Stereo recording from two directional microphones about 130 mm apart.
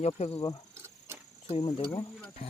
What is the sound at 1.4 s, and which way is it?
Speech, 50° left (ahead or behind).